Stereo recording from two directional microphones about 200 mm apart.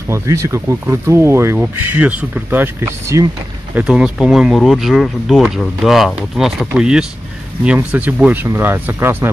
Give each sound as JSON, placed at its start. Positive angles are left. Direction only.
{"t": 0.1, "sound": "speech", "side_deg": -15}